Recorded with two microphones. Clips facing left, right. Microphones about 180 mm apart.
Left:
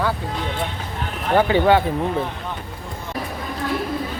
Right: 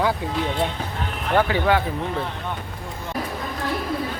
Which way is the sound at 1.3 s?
25° left (ahead or behind).